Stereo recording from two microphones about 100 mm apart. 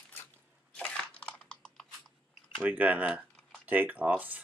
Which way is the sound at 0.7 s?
10° left (ahead or behind).